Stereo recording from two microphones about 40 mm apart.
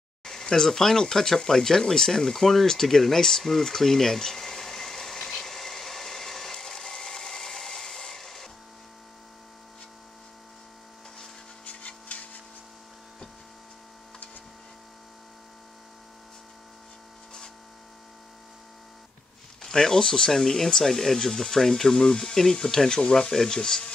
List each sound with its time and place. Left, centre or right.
0.2 s a sound: centre
11.6 s rub: left
19.6 s speech: centre